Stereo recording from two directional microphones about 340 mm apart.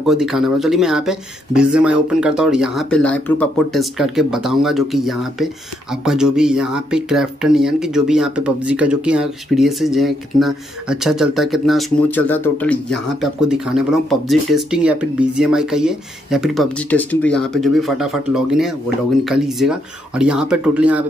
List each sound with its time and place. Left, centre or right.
0.0 s speech: centre